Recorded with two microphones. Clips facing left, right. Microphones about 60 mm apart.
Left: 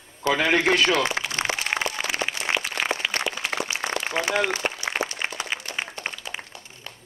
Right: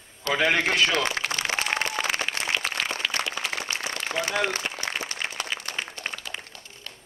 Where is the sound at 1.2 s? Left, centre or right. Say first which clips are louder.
Right 2 dB; right.